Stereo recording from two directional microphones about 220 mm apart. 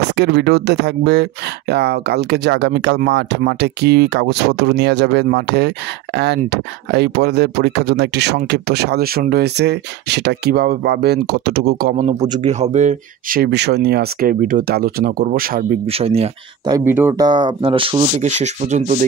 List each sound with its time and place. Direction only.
0.1 s speech: 50° right (ahead or behind)
12.0 s speech: 30° right (ahead or behind)
15.9 s speech: 25° right (ahead or behind)
16.7 s speech: 10° right (ahead or behind); by 19.0 s 30° right (ahead or behind)